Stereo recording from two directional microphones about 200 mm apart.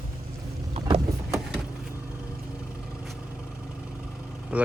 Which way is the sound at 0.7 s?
30° right (ahead or behind).